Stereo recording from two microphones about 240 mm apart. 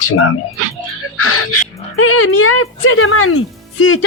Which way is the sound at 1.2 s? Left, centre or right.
Left.